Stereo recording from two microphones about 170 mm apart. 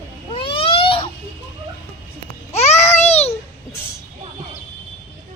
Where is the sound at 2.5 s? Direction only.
40° left (ahead or behind).